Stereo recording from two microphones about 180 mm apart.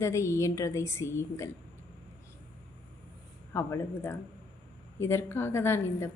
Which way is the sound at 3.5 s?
15° left (ahead or behind).